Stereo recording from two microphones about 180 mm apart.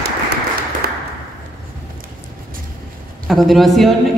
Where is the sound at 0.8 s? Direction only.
55° right (ahead or behind).